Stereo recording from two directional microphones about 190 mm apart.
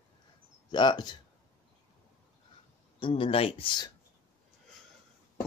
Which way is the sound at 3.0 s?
30° left (ahead or behind).